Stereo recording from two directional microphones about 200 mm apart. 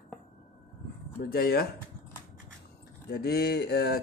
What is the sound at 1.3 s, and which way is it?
Speech, 50° left (ahead or behind).